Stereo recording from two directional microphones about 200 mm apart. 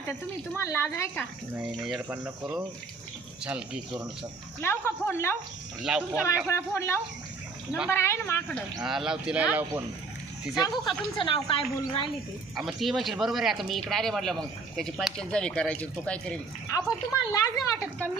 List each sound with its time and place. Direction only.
0.5 s speech: 15° left (ahead or behind)
1.5 s speech: 5° right (ahead or behind)
4.6 s speech: 10° left (ahead or behind)
5.8 s speech: 5° right (ahead or behind)
6.5 s speech: 15° left (ahead or behind); by 9.8 s 5° right (ahead or behind)
10.6 s a woman's voice: 20° left (ahead or behind)
12.5 s speech: centre (ahead or behind)
16.7 s speech: 15° left (ahead or behind)